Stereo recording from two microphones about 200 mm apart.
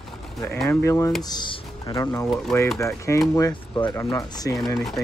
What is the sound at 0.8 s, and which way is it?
Speech, 15° left (ahead or behind).